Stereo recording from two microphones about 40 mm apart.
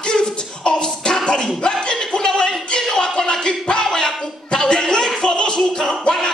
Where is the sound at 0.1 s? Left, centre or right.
Centre.